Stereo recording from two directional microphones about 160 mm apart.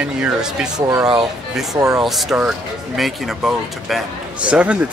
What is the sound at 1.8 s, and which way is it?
Speech, 20° right (ahead or behind).